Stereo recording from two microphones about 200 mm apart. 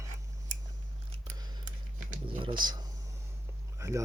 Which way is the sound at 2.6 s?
20° right (ahead or behind).